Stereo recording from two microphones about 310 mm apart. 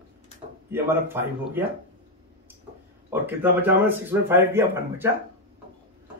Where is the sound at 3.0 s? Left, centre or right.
Centre.